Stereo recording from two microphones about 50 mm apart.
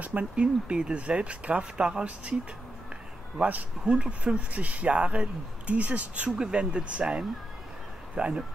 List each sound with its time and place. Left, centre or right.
0.0 s speech: right
3.4 s speech: centre
6.3 s speech: centre